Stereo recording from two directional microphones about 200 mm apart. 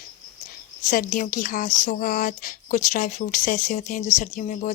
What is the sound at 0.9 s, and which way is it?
Speech, 40° left (ahead or behind).